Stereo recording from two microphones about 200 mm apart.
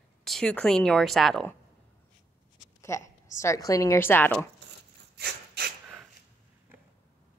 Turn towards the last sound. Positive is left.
turn(degrees=-55)  # may be behind; listen again after turning